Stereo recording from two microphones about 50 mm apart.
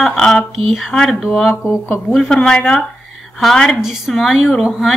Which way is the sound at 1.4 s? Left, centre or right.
Centre.